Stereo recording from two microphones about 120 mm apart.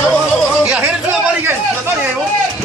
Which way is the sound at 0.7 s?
5° right (ahead or behind).